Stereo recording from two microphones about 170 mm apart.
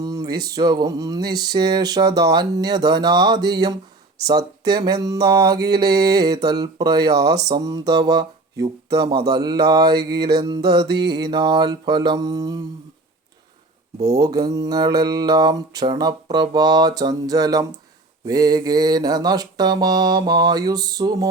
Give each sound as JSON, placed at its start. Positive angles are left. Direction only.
{"t": 0.0, "sound": "a sound", "side_deg": -20}
{"t": 0.4, "sound": "mantra", "side_deg": -25}
{"t": 14.0, "sound": "mantra", "side_deg": -20}